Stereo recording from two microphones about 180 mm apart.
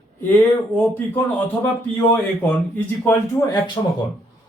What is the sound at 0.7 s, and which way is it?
Speech, 10° left (ahead or behind).